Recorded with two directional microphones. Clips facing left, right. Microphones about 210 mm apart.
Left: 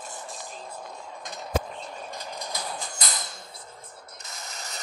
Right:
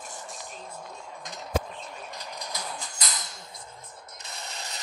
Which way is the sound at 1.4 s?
30° left (ahead or behind).